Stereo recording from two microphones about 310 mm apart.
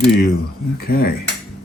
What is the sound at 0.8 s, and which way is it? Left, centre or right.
Cutlery, left.